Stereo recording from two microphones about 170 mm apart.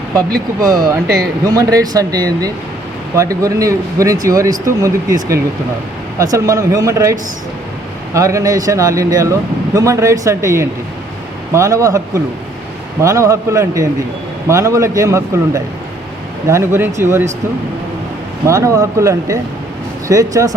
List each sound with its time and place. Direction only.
0.6 s speech: 20° right (ahead or behind)
6.1 s speech: 20° right (ahead or behind)
18.4 s speech: 20° right (ahead or behind)